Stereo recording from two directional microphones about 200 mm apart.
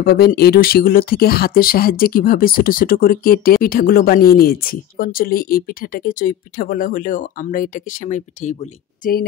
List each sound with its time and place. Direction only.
0.0 s speech: 50° left (ahead or behind)